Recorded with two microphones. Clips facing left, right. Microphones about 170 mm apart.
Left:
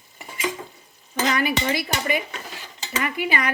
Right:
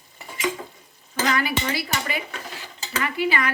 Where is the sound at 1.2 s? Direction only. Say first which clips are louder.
Left 2 dB; 20° left (ahead or behind).